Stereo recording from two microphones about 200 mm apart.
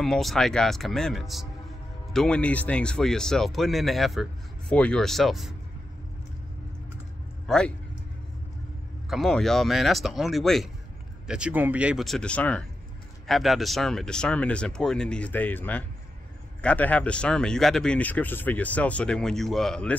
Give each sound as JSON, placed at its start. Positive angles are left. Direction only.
{"t": 0.0, "sound": "speech", "side_deg": 0}
{"t": 7.4, "sound": "speech", "side_deg": 5}
{"t": 9.1, "sound": "speech", "side_deg": 0}